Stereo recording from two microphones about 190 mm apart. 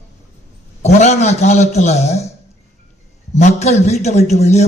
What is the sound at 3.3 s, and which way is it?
A man's voice, 35° left (ahead or behind).